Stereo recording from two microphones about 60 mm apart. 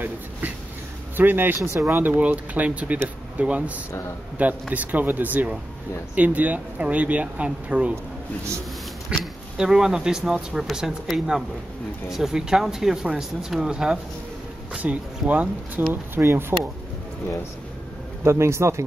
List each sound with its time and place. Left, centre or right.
1.1 s speech: right
1.6 s a man's voice: right
1.9 s speech: right
9.6 s speech: centre; by 15.8 s right
15.9 s speech: right
18.2 s a man's voice: right